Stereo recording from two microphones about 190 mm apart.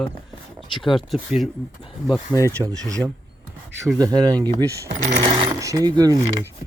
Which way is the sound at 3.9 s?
20° right (ahead or behind).